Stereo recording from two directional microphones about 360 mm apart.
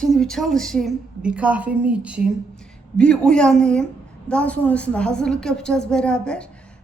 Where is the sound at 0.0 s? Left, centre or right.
Centre.